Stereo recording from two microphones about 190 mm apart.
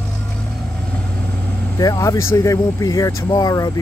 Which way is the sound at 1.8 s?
20° left (ahead or behind).